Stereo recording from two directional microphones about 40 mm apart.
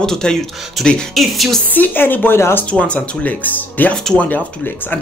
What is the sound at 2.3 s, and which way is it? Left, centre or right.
Speech, left.